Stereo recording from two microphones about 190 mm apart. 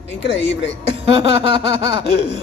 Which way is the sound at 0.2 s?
70° left (ahead or behind).